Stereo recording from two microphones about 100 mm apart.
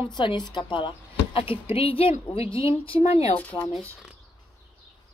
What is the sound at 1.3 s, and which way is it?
A woman's voice, 70° left (ahead or behind).